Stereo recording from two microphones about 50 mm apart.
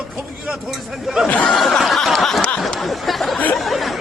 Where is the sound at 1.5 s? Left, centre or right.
Centre.